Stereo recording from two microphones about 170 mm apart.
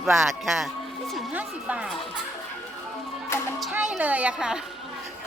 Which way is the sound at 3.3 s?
15° left (ahead or behind).